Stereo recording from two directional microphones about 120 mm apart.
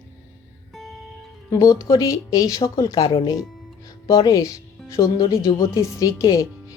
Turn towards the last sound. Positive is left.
turn(degrees=30)  # may be behind; listen again after turning